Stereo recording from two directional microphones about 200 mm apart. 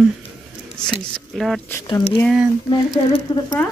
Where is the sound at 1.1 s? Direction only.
Centre (ahead or behind).